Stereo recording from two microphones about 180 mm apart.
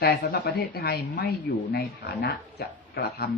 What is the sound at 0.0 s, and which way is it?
A woman's voice, 60° left (ahead or behind).